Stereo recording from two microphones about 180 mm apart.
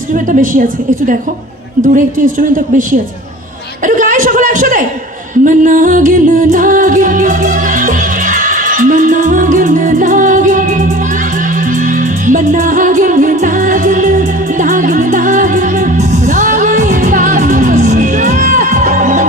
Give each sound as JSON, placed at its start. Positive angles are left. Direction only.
{"t": 0.1, "sound": "a man's voice", "side_deg": -45}
{"t": 1.8, "sound": "a man's voice", "side_deg": -45}
{"t": 5.5, "sound": "music", "side_deg": -45}
{"t": 12.2, "sound": "music", "side_deg": -45}